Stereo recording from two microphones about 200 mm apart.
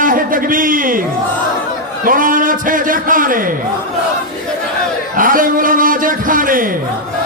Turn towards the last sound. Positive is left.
turn(degrees=-45)  # may be behind; listen again after turning